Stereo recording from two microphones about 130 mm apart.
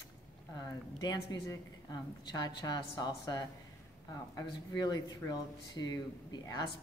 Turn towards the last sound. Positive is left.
turn(degrees=30)  # may be behind; listen again after turning